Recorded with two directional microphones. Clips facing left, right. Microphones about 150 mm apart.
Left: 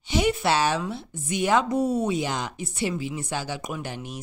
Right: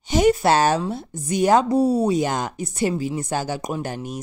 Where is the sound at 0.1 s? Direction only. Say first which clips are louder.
Right 6 dB; 40° right (ahead or behind).